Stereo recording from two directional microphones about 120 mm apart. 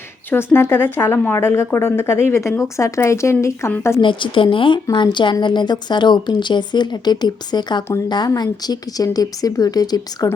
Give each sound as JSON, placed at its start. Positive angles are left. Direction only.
{"t": 0.3, "sound": "a woman's voice", "side_deg": 20}
{"t": 4.0, "sound": "a woman's voice", "side_deg": 45}